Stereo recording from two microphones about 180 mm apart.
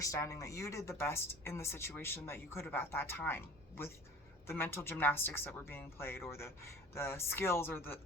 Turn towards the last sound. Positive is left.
turn(degrees=10)  # may be behind; listen again after turning